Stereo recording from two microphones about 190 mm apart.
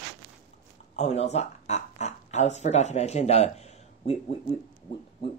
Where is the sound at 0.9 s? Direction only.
35° left (ahead or behind).